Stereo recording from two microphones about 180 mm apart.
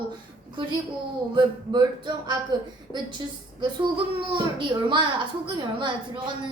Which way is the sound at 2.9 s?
25° right (ahead or behind).